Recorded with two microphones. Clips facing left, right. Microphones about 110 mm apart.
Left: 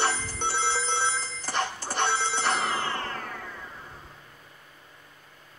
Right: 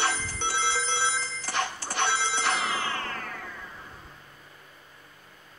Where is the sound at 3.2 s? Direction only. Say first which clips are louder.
Left 1 dB; 10° left (ahead or behind).